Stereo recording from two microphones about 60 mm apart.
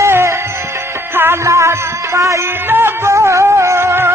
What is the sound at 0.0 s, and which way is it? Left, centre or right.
Music, right.